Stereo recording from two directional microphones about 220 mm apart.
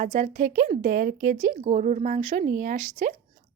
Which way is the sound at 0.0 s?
35° right (ahead or behind).